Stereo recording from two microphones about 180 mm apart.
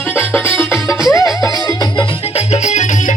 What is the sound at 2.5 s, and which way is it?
Music, 40° left (ahead or behind).